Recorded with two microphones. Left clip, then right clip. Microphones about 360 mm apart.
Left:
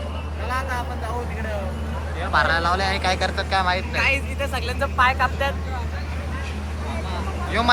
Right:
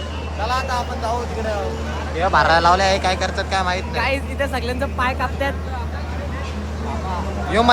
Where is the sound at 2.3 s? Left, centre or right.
Centre.